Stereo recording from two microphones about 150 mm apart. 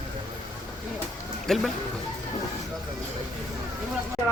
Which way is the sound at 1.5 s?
5° left (ahead or behind).